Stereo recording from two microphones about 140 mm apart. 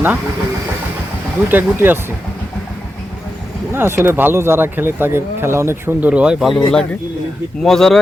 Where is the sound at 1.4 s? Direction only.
15° right (ahead or behind).